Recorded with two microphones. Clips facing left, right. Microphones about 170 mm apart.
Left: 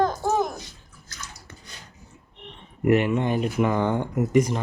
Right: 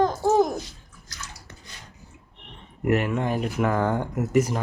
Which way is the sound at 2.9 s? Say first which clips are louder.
Left 3 dB; centre (ahead or behind).